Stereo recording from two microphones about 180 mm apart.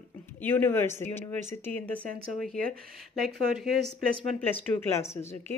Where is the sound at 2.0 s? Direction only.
55° right (ahead or behind).